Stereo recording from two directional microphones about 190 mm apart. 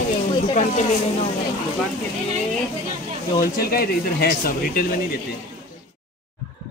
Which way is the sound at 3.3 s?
50° left (ahead or behind).